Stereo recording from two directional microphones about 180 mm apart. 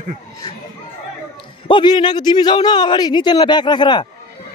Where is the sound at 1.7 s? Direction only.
25° left (ahead or behind).